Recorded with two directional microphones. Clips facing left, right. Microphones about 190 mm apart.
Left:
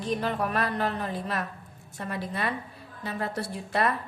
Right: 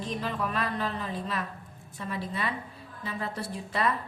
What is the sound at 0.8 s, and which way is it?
A woman's voice, 55° left (ahead or behind).